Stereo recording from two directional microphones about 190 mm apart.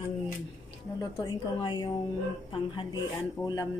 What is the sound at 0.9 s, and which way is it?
A woman's voice, 20° left (ahead or behind).